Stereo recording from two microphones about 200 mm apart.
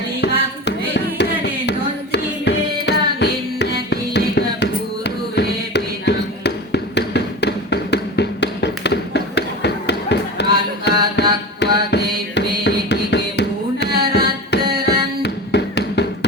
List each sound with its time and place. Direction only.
0.2 s music: 60° left (ahead or behind)
2.1 s tabla: 60° left (ahead or behind)
10.8 s music: 60° left (ahead or behind)